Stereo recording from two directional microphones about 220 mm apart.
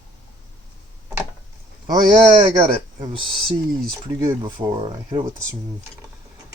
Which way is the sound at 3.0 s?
25° right (ahead or behind).